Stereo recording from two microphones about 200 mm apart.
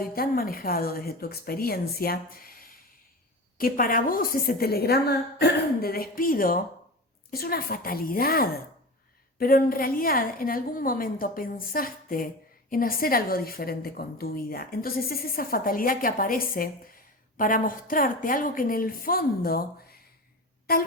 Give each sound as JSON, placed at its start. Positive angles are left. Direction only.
{"t": 0.1, "sound": "a woman's voice", "side_deg": 45}